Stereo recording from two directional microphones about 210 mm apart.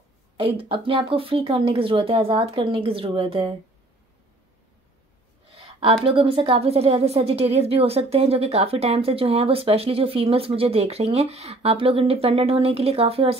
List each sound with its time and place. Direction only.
0.4 s speech: 25° right (ahead or behind)
5.6 s a sound: 25° right (ahead or behind)
6.0 s speech: 25° right (ahead or behind)